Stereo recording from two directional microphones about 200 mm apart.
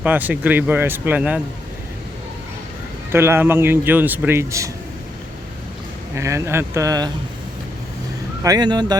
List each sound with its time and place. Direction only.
0.0 s a man's voice: 10° right (ahead or behind)
3.1 s a man's voice: 10° right (ahead or behind)
6.1 s a man's voice: 15° right (ahead or behind)
8.4 s speech: 20° right (ahead or behind)